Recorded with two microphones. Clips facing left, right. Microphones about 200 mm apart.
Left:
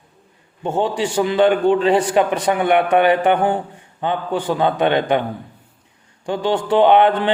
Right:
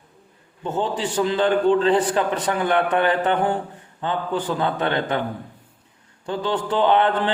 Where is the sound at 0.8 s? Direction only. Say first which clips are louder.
Left 4 dB; 70° left (ahead or behind).